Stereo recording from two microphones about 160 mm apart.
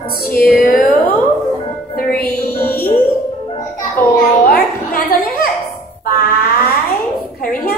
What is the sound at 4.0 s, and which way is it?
A child's voice, 60° left (ahead or behind).